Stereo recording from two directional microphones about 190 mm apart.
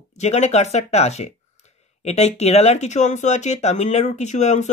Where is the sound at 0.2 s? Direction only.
35° left (ahead or behind).